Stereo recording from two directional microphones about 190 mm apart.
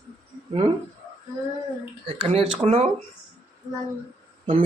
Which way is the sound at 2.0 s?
30° right (ahead or behind).